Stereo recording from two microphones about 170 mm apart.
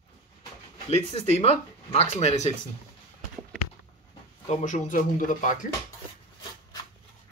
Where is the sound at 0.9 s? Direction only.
40° left (ahead or behind).